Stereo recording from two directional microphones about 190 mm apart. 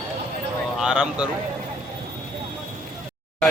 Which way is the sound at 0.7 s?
5° right (ahead or behind).